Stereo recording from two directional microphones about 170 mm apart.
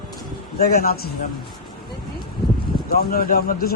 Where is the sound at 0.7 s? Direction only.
60° left (ahead or behind).